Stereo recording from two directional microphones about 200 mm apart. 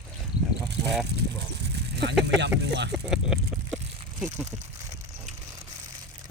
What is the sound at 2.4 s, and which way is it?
Speech, 60° right (ahead or behind).